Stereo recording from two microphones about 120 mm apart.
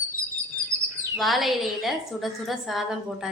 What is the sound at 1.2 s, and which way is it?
Speech, centre (ahead or behind).